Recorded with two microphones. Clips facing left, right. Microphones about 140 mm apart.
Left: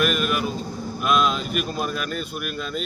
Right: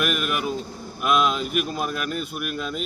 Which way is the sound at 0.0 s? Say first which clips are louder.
Left 3 dB; 5° right (ahead or behind).